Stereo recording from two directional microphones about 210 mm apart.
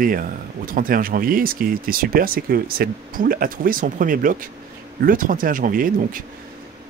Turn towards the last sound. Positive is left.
turn(degrees=-40)  # may be behind; listen again after turning